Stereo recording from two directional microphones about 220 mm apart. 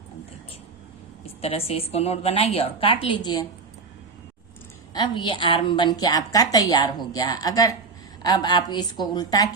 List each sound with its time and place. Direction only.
1.2 s a woman's voice: 25° left (ahead or behind)
4.9 s a woman's voice: 20° left (ahead or behind)